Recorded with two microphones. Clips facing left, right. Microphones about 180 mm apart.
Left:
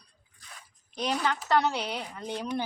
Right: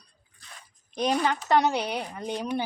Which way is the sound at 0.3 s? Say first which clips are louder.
Right 1 dB; 10° left (ahead or behind).